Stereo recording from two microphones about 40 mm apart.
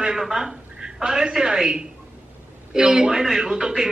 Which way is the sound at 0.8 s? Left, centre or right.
Right.